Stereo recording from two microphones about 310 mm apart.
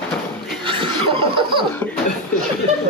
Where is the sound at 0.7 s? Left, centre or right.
Centre.